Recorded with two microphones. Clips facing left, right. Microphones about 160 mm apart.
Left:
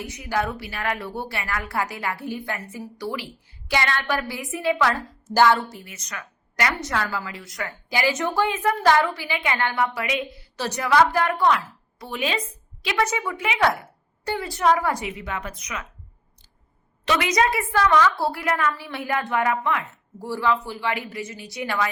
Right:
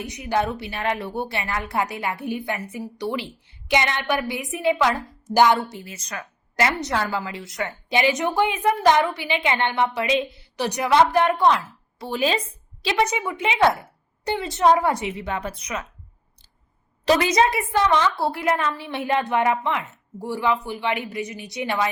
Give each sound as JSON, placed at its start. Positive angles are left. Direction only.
{"t": 0.0, "sound": "a woman's voice", "side_deg": -20}
{"t": 17.1, "sound": "a woman's voice", "side_deg": -30}